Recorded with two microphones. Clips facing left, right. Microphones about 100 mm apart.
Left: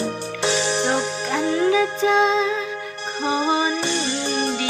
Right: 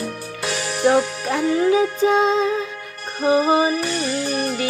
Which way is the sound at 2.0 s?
50° right (ahead or behind).